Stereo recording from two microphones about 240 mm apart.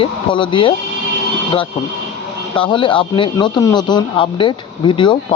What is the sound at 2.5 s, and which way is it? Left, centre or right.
Speech, left.